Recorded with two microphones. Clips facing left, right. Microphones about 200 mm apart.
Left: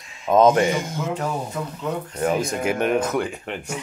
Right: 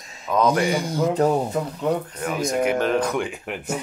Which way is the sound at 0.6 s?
35° right (ahead or behind).